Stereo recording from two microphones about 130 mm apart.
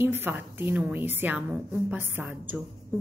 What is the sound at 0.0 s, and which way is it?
A woman's voice, 20° right (ahead or behind).